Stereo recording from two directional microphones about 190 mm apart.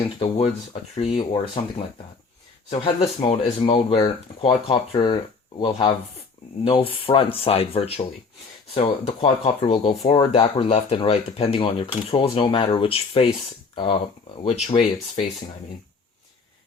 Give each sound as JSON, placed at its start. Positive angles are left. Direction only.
{"t": 0.2, "sound": "speech", "side_deg": 30}
{"t": 2.6, "sound": "speech", "side_deg": 30}